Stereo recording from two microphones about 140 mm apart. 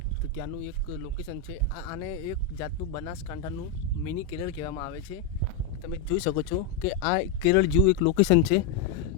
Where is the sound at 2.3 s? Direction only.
30° left (ahead or behind).